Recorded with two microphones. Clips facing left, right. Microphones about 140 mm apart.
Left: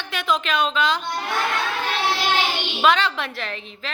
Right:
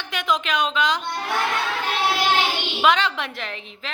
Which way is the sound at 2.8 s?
15° right (ahead or behind).